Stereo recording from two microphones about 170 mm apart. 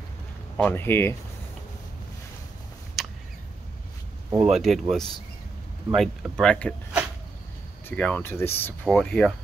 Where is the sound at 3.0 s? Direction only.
Centre (ahead or behind).